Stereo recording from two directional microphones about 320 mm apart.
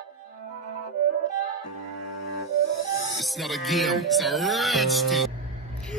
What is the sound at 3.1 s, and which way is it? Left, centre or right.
A woman's voice, centre.